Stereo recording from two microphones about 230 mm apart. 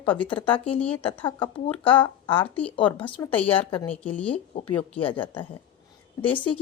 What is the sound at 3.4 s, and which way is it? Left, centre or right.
Speech, left.